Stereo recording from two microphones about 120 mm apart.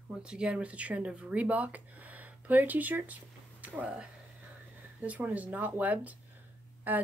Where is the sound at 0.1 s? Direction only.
5° right (ahead or behind).